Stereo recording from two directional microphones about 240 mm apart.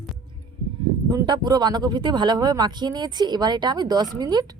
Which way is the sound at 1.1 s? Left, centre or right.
Centre.